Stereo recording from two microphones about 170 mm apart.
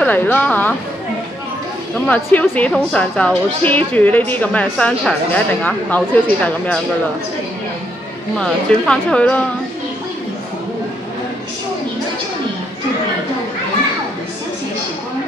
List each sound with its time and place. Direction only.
0.0 s a woman's voice: 10° left (ahead or behind)
2.0 s a woman's voice: 10° left (ahead or behind)
8.4 s a woman's voice: 5° left (ahead or behind)